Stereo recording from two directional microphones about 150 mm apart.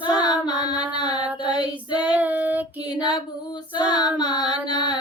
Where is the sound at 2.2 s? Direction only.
10° right (ahead or behind).